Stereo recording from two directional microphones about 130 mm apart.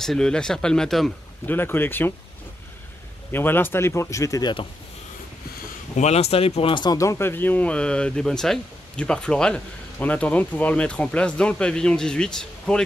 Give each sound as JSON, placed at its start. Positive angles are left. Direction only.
{"t": 0.0, "sound": "speech", "side_deg": 5}
{"t": 1.5, "sound": "speech", "side_deg": 15}
{"t": 3.3, "sound": "a man's voice", "side_deg": 15}
{"t": 5.9, "sound": "speech", "side_deg": 55}